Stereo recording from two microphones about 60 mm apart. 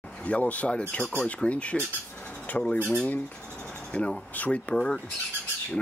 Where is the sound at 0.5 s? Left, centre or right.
Centre.